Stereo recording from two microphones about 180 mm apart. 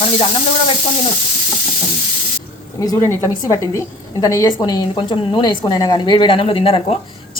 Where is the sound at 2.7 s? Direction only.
20° left (ahead or behind).